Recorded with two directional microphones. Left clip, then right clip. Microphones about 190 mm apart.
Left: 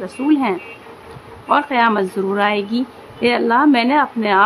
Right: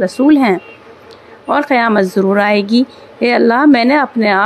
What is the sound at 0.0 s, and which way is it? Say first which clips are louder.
A woman's voice: right 7 dB; 30° right (ahead or behind).